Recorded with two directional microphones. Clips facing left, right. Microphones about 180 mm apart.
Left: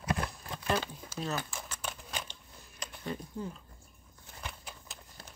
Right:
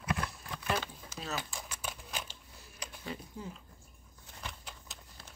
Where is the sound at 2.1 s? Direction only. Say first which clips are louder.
Left 1 dB; centre (ahead or behind).